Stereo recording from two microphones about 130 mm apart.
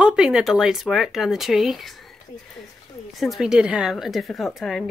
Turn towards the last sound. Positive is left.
turn(degrees=0)  # may be behind; listen again after turning